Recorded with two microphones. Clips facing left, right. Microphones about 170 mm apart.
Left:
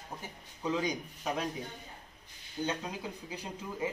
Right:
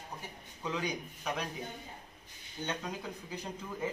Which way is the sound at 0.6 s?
20° left (ahead or behind).